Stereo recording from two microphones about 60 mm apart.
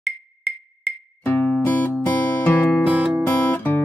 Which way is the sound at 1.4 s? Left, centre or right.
Left.